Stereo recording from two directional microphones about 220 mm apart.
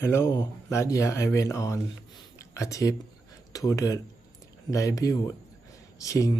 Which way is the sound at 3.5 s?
15° left (ahead or behind).